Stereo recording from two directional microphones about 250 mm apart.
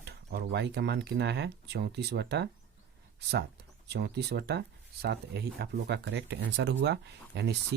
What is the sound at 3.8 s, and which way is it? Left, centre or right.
Speech, right.